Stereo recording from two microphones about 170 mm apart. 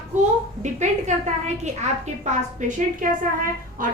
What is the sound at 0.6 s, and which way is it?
Speech, 45° right (ahead or behind).